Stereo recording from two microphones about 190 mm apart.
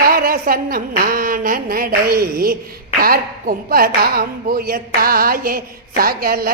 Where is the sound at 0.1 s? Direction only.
50° right (ahead or behind).